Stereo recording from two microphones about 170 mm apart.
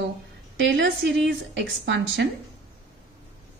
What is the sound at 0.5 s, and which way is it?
A woman's voice, 90° right.